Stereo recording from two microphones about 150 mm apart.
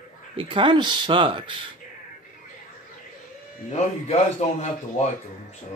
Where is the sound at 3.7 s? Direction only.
45° left (ahead or behind).